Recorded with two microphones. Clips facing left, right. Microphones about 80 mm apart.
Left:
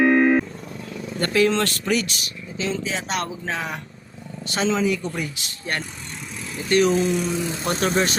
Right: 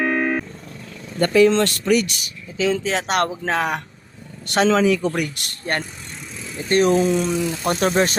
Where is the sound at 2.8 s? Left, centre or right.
Right.